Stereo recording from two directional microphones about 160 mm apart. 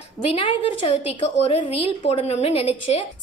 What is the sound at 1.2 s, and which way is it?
A woman's voice, 30° left (ahead or behind).